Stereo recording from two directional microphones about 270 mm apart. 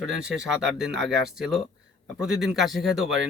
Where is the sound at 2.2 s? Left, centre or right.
Centre.